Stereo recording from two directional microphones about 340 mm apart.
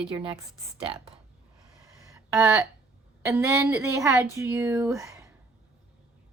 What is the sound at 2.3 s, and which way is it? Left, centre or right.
A woman's voice, centre.